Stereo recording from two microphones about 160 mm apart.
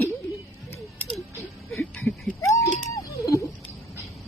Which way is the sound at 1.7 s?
10° left (ahead or behind).